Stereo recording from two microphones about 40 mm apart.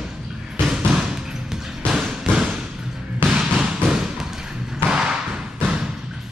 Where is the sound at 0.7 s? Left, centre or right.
Centre.